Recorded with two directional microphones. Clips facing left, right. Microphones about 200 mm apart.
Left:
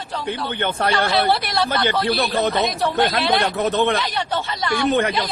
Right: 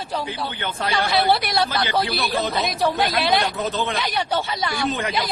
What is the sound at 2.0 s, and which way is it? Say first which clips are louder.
Speech: left 4 dB; 55° left (ahead or behind).